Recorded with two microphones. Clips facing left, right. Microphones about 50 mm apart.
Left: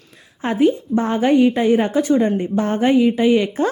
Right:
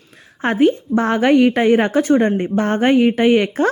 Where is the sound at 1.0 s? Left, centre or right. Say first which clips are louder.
Right 2 dB; right.